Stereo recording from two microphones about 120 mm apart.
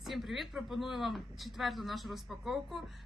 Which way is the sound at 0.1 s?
Centre (ahead or behind).